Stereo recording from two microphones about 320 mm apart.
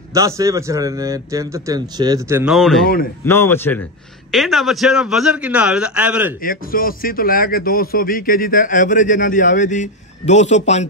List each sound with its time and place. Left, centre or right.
0.1 s a man's voice: centre
6.4 s a man's voice: left